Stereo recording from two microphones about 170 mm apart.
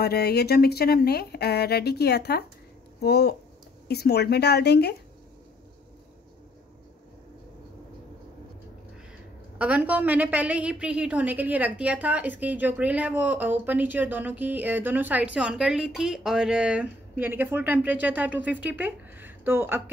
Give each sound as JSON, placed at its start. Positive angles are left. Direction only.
{"t": 0.0, "sound": "speech", "side_deg": 70}
{"t": 9.6, "sound": "a woman's voice", "side_deg": -10}